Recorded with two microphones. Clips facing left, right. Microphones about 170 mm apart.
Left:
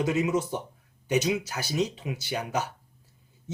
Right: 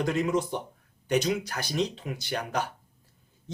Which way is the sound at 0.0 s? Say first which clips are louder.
Left 1 dB; 5° left (ahead or behind).